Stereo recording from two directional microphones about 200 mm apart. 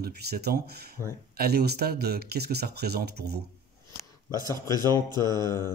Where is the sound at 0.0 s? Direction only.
55° right (ahead or behind).